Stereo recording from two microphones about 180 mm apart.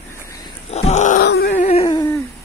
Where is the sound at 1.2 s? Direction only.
60° left (ahead or behind).